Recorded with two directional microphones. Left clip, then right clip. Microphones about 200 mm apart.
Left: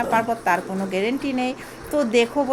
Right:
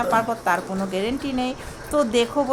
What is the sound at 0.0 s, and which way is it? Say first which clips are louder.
Speech: even; centre (ahead or behind).